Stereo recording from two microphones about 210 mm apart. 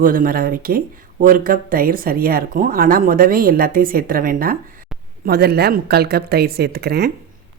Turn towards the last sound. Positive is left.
turn(degrees=-50)  # may be behind; listen again after turning